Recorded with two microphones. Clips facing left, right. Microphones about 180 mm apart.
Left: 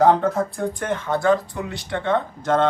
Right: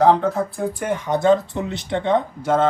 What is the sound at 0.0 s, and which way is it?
Speech, centre (ahead or behind).